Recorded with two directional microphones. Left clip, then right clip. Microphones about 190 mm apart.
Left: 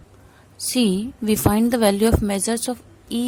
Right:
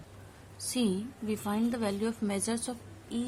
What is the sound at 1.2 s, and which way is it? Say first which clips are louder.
Speech: left 13 dB; 50° left (ahead or behind).